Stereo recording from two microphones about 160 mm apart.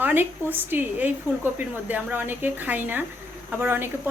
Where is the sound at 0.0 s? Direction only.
15° right (ahead or behind).